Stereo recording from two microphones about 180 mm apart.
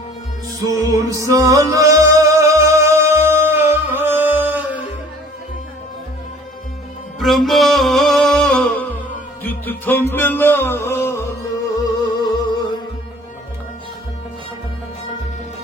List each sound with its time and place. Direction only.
0.6 s music: 20° right (ahead or behind)
7.2 s music: centre (ahead or behind); by 12.5 s 25° left (ahead or behind)